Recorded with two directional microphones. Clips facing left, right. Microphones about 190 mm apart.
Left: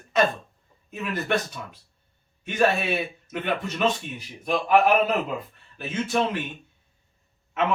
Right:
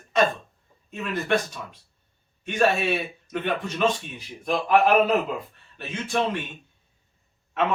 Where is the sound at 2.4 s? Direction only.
5° left (ahead or behind).